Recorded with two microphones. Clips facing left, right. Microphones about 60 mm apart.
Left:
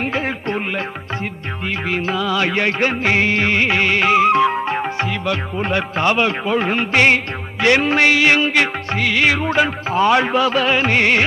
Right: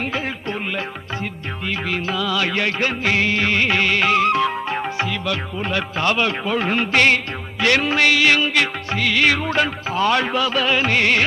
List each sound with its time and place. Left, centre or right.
1.2 s music: left